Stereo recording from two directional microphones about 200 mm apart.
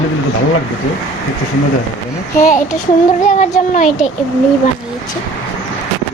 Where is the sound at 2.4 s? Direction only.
40° left (ahead or behind).